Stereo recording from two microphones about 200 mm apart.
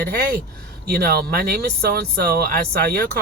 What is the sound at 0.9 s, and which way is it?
Speech, 50° right (ahead or behind).